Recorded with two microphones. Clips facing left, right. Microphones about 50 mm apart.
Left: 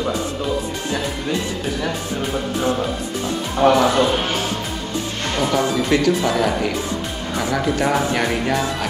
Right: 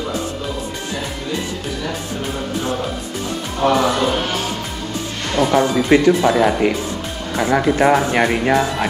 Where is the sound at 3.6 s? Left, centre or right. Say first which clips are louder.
Left 2 dB; left.